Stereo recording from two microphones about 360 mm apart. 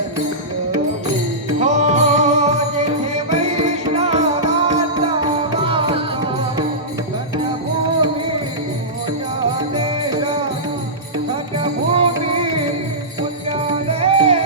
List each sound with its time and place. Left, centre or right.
1.5 s music: centre
9.7 s music: centre
11.3 s music: centre
13.8 s music: centre